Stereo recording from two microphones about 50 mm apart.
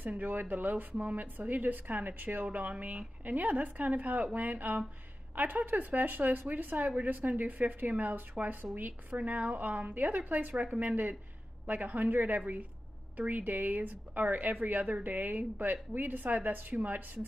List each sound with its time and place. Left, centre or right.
0.0 s a woman's voice: right